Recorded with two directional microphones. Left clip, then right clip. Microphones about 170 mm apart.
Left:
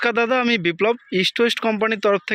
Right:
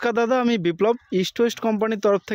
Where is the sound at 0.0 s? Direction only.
15° right (ahead or behind).